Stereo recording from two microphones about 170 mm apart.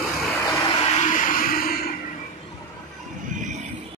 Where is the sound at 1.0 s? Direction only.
50° left (ahead or behind).